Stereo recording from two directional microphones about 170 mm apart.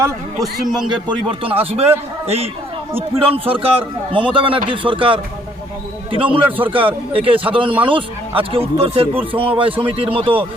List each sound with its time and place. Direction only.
0.3 s a man's voice: centre (ahead or behind)
0.9 s a man's voice: 25° right (ahead or behind)
6.3 s a man's voice: 30° right (ahead or behind)